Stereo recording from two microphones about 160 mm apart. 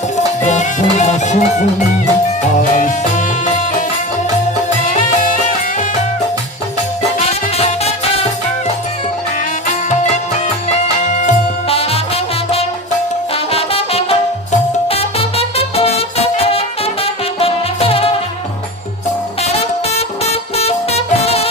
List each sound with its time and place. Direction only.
0.4 s music: 50° left (ahead or behind)
2.7 s music: 55° left (ahead or behind)
4.9 s music: 55° left (ahead or behind)
11.1 s music: 45° left (ahead or behind)
13.3 s music: 40° left (ahead or behind)
19.4 s music: 40° left (ahead or behind)